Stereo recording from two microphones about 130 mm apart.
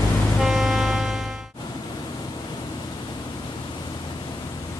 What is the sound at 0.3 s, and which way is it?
Music, centre (ahead or behind).